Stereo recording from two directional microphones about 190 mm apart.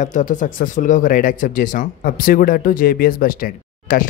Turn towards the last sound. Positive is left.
turn(degrees=45)  # may be behind; listen again after turning